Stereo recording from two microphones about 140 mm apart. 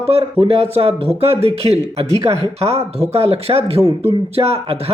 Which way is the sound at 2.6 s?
45° right (ahead or behind).